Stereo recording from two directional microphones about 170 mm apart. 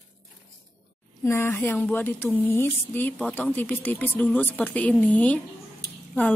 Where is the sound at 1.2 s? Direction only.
15° left (ahead or behind).